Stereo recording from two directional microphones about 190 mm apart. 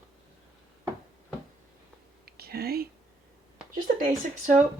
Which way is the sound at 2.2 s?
55° right (ahead or behind).